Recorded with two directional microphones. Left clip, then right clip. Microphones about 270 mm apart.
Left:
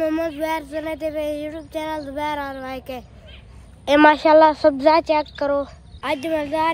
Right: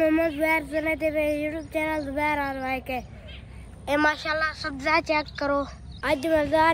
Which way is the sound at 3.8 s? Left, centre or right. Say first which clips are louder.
Left 10 dB; left.